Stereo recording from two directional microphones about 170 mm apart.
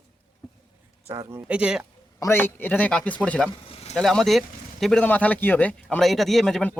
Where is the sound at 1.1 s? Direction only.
20° right (ahead or behind).